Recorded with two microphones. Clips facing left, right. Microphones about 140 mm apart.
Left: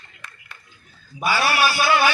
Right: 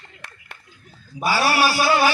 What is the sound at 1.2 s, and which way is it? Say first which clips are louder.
Speech: right 1 dB; 35° right (ahead or behind).